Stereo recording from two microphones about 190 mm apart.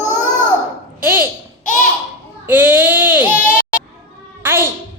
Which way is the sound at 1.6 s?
40° left (ahead or behind).